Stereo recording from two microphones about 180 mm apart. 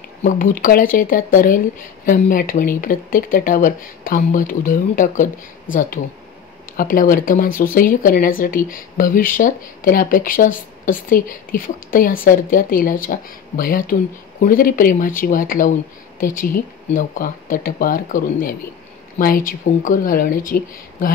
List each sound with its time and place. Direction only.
0.2 s speech: 50° left (ahead or behind)